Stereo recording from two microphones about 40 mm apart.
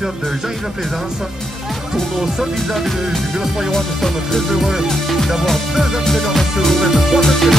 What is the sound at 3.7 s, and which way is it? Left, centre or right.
Speech, centre.